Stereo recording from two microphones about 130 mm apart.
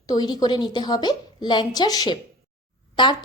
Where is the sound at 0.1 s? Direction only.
30° left (ahead or behind).